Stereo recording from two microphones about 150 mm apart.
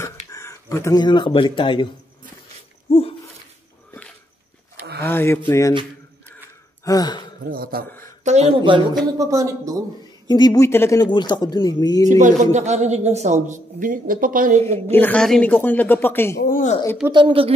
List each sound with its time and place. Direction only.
0.0 s speech: 20° left (ahead or behind)
2.9 s dog: 40° left (ahead or behind)
5.0 s speech: 15° left (ahead or behind)
6.8 s speech: 25° left (ahead or behind)
7.4 s a man's voice: 80° right
8.2 s speech: 50° right (ahead or behind)
9.2 s speech: 20° right (ahead or behind)
10.2 s speech: 30° left (ahead or behind)
11.1 s speech: 30° left (ahead or behind)
12.1 s speech: 55° right (ahead or behind)
14.9 s speech: 10° left (ahead or behind)
16.4 s speech: 65° left (ahead or behind)
17.1 s speech: 35° right (ahead or behind)